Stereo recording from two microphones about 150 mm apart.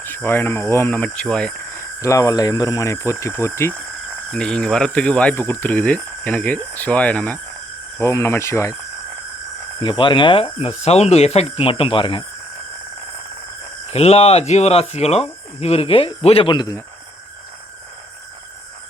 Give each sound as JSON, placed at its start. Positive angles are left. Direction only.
{"t": 0.0, "sound": "speech", "side_deg": 15}
{"t": 4.3, "sound": "speech", "side_deg": 5}
{"t": 9.8, "sound": "speech", "side_deg": 35}
{"t": 13.9, "sound": "speech", "side_deg": 45}